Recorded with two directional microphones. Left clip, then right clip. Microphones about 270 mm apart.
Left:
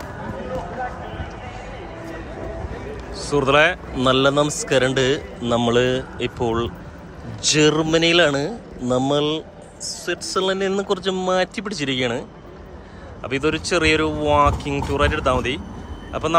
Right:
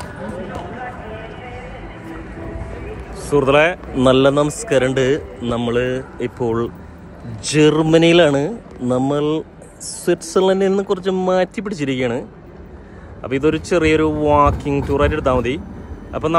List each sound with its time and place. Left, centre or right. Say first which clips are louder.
3.2 s a man's voice: right 3 dB; centre